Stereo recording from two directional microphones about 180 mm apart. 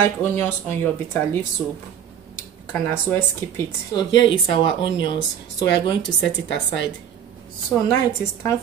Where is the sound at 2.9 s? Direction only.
10° left (ahead or behind).